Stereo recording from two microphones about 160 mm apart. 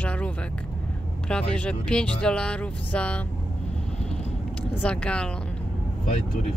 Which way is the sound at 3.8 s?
5° left (ahead or behind).